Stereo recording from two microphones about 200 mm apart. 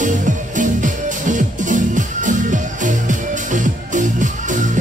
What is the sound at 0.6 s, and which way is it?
Music, 40° right (ahead or behind).